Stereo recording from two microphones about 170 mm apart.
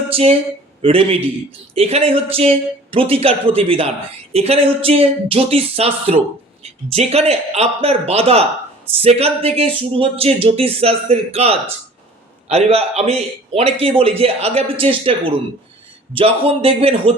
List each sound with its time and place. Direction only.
0.1 s a man's voice: 35° right (ahead or behind)